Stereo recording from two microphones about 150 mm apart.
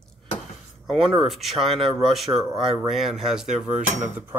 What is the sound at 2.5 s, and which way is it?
Speech, 30° right (ahead or behind).